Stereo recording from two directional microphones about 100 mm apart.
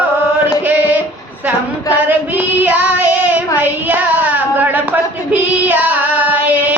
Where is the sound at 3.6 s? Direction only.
20° right (ahead or behind).